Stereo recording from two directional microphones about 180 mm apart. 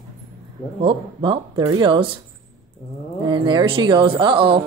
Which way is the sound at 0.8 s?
25° right (ahead or behind).